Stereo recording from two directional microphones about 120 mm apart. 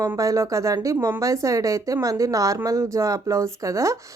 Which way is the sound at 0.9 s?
15° right (ahead or behind).